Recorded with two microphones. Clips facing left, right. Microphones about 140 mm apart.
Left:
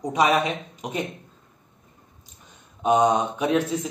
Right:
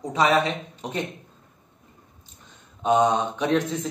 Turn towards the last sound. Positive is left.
turn(degrees=10)  # may be behind; listen again after turning